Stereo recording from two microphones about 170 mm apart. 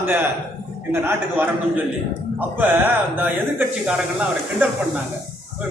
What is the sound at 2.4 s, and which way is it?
Speech, 10° right (ahead or behind).